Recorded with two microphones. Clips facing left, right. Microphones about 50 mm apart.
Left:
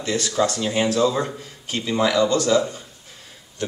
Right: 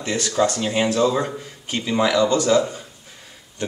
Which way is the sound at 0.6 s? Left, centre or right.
Centre.